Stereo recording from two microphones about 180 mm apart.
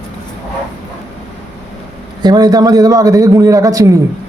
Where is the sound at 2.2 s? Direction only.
20° right (ahead or behind).